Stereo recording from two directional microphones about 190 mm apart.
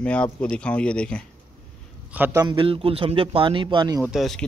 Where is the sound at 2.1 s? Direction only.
10° right (ahead or behind).